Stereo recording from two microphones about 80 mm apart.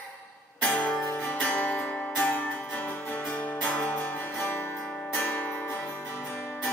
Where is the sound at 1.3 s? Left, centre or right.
Centre.